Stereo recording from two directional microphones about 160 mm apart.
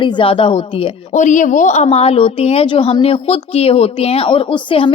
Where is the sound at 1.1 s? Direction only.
50° left (ahead or behind).